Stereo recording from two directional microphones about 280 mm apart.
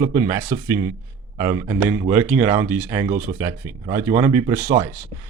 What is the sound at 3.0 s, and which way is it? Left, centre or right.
Speech, right.